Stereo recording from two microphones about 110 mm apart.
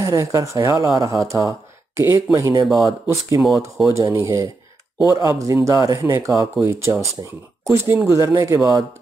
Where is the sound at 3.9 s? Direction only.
25° right (ahead or behind).